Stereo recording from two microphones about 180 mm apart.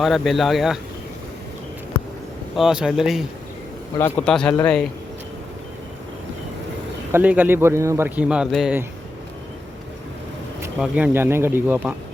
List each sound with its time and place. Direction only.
0.0 s speech: centre (ahead or behind)
2.6 s speech: 5° right (ahead or behind)
3.9 s a man's voice: 10° left (ahead or behind)
7.1 s a man's voice: 10° right (ahead or behind)
10.8 s a man's voice: 10° right (ahead or behind)